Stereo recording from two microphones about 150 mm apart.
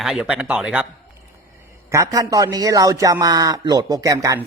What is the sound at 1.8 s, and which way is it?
A man's voice, 20° right (ahead or behind).